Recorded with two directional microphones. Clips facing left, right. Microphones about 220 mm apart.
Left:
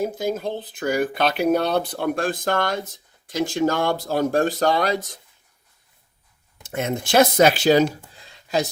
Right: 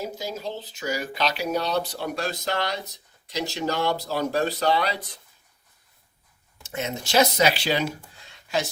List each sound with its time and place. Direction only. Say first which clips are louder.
0.0 s speech: left 7 dB; 55° left (ahead or behind)
6.6 s speech: left 5 dB; 55° left (ahead or behind)
8.2 s a sound: left 4 dB; 40° left (ahead or behind)